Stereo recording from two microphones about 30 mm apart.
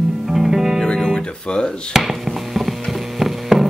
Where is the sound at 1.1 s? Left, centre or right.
Left.